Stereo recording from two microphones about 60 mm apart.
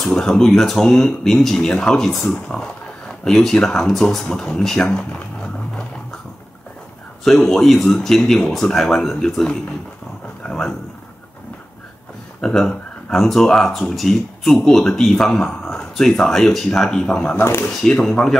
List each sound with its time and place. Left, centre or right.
0.1 s speech: centre
7.2 s speech: centre
10.4 s a sound: left
12.4 s speech: centre
17.4 s speech: left
17.6 s speech: centre